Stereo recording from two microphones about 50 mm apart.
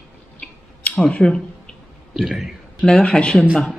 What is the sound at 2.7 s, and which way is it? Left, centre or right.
Speech, centre.